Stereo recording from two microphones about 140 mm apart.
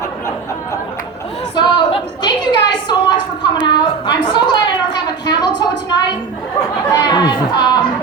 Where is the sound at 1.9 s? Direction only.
35° left (ahead or behind).